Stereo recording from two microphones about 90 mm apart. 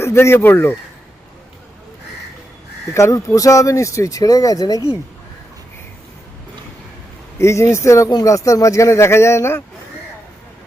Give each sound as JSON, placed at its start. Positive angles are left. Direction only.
{"t": 0.0, "sound": "speech", "side_deg": 30}
{"t": 2.9, "sound": "a man's voice", "side_deg": 35}
{"t": 7.3, "sound": "a man's voice", "side_deg": 30}